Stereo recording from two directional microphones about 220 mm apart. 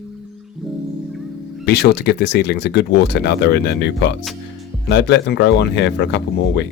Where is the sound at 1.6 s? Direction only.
50° left (ahead or behind).